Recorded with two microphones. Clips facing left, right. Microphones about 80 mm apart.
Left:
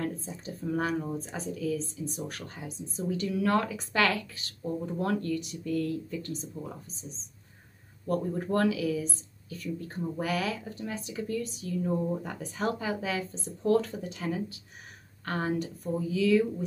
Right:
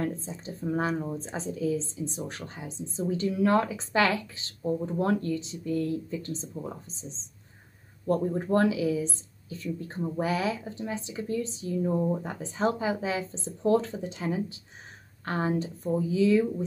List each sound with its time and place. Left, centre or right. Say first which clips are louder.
0.0 s a woman's voice: right 2 dB; right